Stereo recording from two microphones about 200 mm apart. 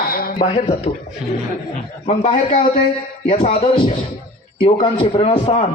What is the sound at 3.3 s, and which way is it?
A man's voice, 30° left (ahead or behind).